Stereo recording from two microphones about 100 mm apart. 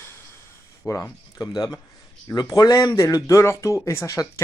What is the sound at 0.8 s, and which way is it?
Speech, 30° left (ahead or behind).